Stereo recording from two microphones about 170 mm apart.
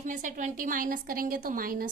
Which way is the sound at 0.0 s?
45° right (ahead or behind).